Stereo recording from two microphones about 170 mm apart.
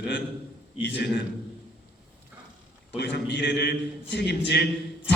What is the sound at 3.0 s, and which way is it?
A man's voice, 85° left.